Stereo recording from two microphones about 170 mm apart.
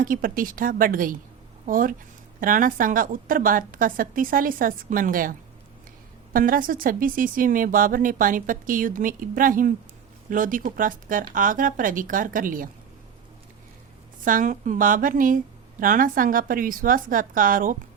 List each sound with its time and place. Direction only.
0.0 s speech: 55° right (ahead or behind)
14.3 s speech: 50° right (ahead or behind)